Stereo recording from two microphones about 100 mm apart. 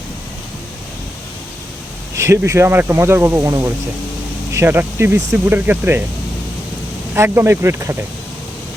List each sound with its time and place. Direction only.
2.1 s speech: 30° right (ahead or behind)
7.1 s speech: 25° right (ahead or behind)